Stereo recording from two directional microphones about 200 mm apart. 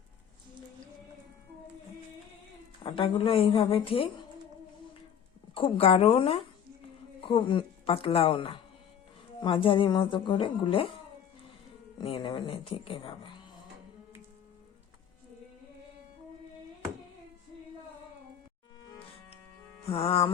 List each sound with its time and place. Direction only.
2.8 s speech: 25° left (ahead or behind)
5.5 s speech: 25° left (ahead or behind)
11.9 s speech: 25° left (ahead or behind)
19.9 s speech: 30° left (ahead or behind)